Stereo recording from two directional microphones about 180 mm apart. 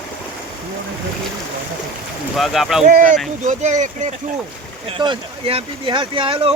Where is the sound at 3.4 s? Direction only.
40° right (ahead or behind).